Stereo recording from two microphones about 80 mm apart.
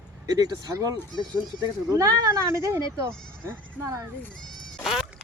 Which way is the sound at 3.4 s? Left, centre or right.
Right.